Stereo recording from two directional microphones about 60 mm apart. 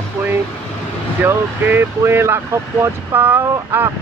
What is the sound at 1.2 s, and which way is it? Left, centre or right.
Speech, right.